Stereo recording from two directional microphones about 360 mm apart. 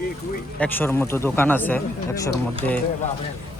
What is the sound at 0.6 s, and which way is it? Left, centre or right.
A man's voice, centre.